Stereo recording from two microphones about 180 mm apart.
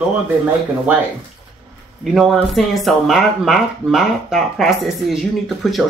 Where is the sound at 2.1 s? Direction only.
Centre (ahead or behind).